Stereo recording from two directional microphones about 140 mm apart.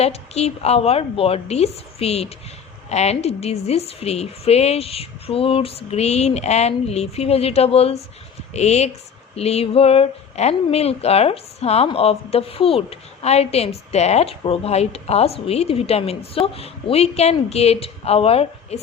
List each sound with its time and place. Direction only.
0.0 s speech: 50° left (ahead or behind)